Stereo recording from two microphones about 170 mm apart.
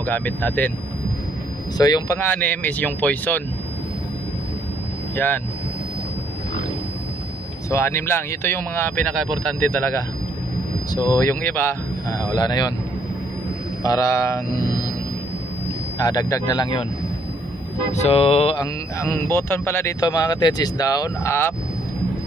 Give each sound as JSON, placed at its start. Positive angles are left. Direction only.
{"t": 0.0, "sound": "speech", "side_deg": 10}
{"t": 1.8, "sound": "speech", "side_deg": 25}
{"t": 5.1, "sound": "speech", "side_deg": 10}
{"t": 7.7, "sound": "speech", "side_deg": 15}
{"t": 13.8, "sound": "a man's voice", "side_deg": 20}
{"t": 16.0, "sound": "a man's voice", "side_deg": 20}
{"t": 17.9, "sound": "speech", "side_deg": 40}
{"t": 18.6, "sound": "a man's voice", "side_deg": 15}